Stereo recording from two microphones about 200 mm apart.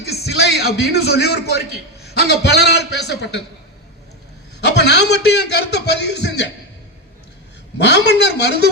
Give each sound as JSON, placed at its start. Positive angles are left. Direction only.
{"t": 0.1, "sound": "a man's voice", "side_deg": 55}
{"t": 4.6, "sound": "a man's voice", "side_deg": 60}
{"t": 7.8, "sound": "a man's voice", "side_deg": 60}